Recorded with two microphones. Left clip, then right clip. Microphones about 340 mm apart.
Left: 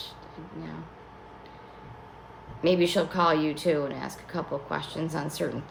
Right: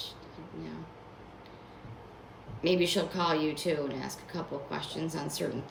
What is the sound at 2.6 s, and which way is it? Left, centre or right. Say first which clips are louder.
Speech: left 4 dB; centre.